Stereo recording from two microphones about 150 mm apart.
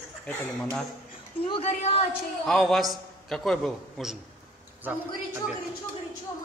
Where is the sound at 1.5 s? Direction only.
45° left (ahead or behind).